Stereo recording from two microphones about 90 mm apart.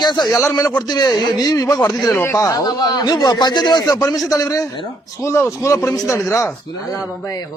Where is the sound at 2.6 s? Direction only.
50° left (ahead or behind); by 6.5 s 35° left (ahead or behind).